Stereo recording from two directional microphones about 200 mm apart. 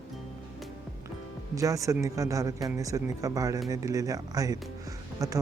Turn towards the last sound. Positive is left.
turn(degrees=-15)  # may be behind; listen again after turning